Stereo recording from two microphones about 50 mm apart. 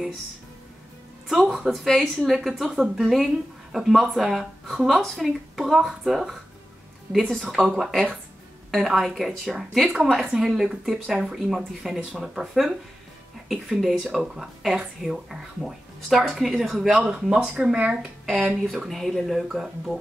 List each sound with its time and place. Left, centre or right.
1.3 s speech: centre
13.7 s speech: centre
18.3 s speech: right
18.7 s speech: centre